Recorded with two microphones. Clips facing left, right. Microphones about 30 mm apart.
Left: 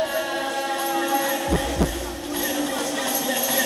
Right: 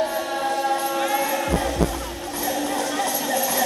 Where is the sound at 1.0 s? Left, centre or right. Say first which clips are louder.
Even; right.